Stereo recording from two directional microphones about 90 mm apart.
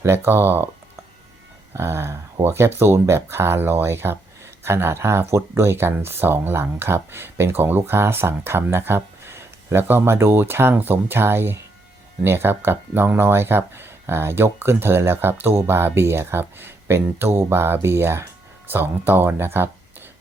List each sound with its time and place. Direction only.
0.0 s speech: 25° right (ahead or behind)
1.7 s speech: 30° right (ahead or behind)